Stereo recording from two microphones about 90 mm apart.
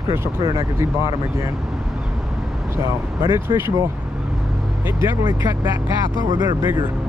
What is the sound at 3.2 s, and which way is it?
Speech, 25° right (ahead or behind).